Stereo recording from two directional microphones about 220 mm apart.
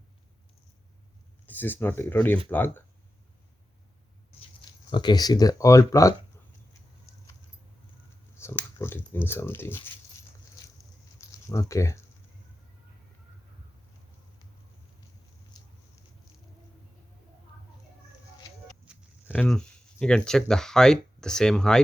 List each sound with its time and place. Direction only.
1.5 s speech: 10° left (ahead or behind)
4.9 s speech: 20° left (ahead or behind)
8.4 s speech: 10° left (ahead or behind)
11.2 s speech: 15° left (ahead or behind)
15.6 s a sound: 20° left (ahead or behind)
18.9 s a sound: 5° right (ahead or behind)
19.3 s speech: 5° left (ahead or behind)